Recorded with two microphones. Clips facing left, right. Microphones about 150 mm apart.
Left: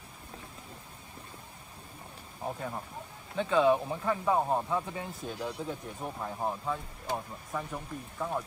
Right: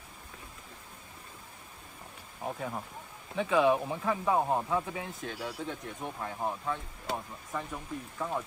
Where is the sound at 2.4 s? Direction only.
5° right (ahead or behind).